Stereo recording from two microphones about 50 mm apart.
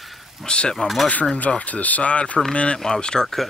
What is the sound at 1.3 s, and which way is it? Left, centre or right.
Speech, left.